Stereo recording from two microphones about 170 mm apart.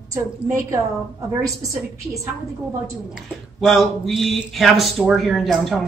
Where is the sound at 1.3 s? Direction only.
20° right (ahead or behind).